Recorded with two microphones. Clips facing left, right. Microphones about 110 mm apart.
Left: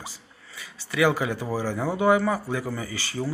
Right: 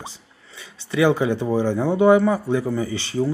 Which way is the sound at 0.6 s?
25° right (ahead or behind).